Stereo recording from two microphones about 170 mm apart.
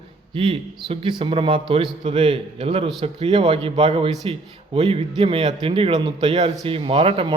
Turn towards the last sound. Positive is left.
turn(degrees=-35)  # may be behind; listen again after turning